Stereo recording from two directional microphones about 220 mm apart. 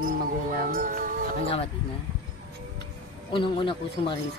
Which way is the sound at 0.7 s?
40° right (ahead or behind).